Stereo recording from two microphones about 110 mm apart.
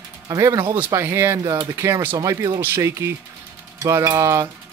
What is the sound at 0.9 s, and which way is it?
Speech, 25° right (ahead or behind).